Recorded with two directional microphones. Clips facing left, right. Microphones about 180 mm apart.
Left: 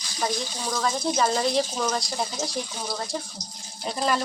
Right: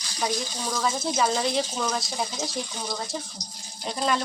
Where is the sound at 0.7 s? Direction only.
5° right (ahead or behind).